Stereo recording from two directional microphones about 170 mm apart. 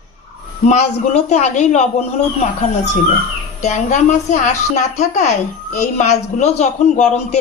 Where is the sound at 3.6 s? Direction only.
45° left (ahead or behind).